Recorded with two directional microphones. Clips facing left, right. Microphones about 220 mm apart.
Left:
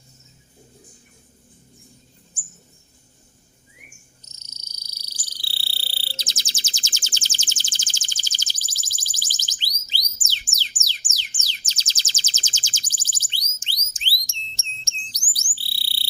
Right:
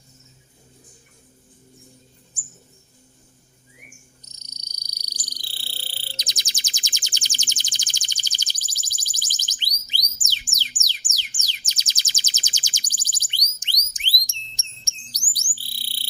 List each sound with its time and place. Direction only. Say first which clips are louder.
3.8 s frog: right 3 dB; 15° right (ahead or behind)
5.5 s a sound: even; 15° right (ahead or behind)
10.5 s music: right 1 dB; 15° right (ahead or behind)
14.4 s bird: left 3 dB; 15° right (ahead or behind)